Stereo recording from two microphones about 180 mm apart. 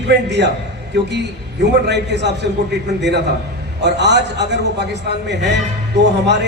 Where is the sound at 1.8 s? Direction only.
70° right (ahead or behind).